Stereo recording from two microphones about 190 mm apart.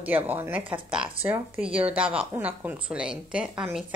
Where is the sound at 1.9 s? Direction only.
5° right (ahead or behind).